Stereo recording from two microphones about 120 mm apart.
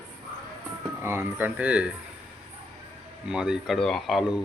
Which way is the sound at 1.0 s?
15° right (ahead or behind).